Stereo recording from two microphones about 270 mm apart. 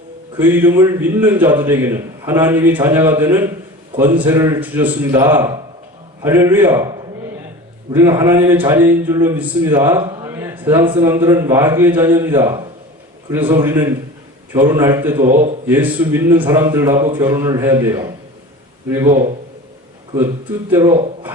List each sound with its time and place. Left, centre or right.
0.3 s speech: centre
7.9 s speech: centre
15.2 s a man's voice: right
15.6 s speech: centre
20.7 s speech: centre